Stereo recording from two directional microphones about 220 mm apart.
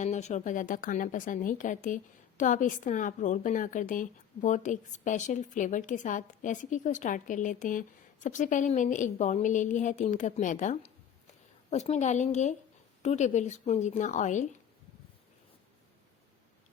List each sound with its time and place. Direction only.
0.0 s a woman's voice: 30° left (ahead or behind)